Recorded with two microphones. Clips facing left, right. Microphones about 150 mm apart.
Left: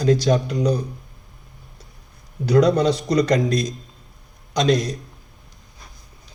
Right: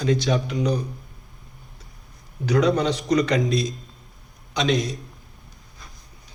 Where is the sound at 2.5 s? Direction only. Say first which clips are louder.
Left 4 dB; 40° left (ahead or behind).